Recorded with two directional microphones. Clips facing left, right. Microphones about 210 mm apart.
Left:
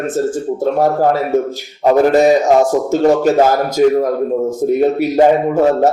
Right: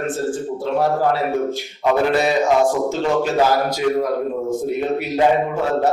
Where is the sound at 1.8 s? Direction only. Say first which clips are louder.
Left 7 dB; 45° left (ahead or behind).